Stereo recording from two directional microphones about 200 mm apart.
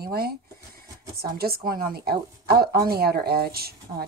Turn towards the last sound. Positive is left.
turn(degrees=-50)  # may be behind; listen again after turning